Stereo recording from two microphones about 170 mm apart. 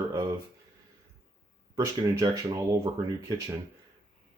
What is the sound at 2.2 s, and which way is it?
Speech, 20° right (ahead or behind).